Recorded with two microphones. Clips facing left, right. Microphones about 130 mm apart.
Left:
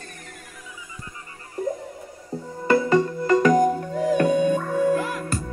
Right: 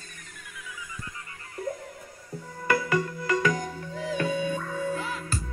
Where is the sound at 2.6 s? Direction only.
30° left (ahead or behind).